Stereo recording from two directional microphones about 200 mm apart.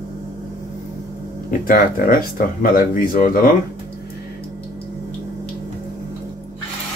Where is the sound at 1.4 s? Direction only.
45° left (ahead or behind).